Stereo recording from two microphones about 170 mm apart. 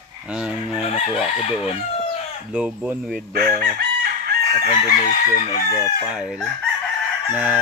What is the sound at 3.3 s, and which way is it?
Chicken, 60° right (ahead or behind).